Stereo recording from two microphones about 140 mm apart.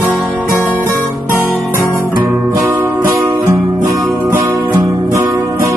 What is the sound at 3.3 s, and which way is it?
Music, centre (ahead or behind).